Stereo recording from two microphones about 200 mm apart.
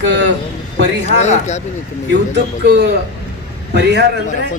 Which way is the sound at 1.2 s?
35° left (ahead or behind).